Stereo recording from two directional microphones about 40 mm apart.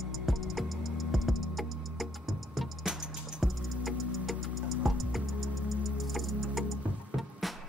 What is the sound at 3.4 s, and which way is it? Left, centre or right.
Music, centre.